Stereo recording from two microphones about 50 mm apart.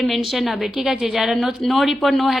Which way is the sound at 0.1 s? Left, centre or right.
Centre.